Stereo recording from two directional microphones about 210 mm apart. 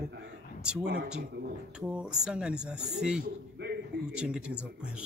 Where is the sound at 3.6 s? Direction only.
55° right (ahead or behind).